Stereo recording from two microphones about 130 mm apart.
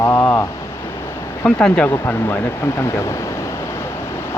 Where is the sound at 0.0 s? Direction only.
20° left (ahead or behind).